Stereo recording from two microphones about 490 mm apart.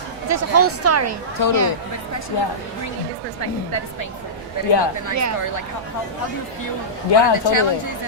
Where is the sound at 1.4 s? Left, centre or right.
Left.